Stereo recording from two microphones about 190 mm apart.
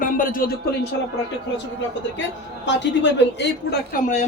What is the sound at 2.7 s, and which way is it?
A woman's voice, 70° left (ahead or behind).